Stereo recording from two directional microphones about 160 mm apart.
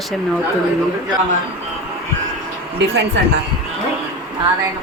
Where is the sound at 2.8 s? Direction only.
90° right.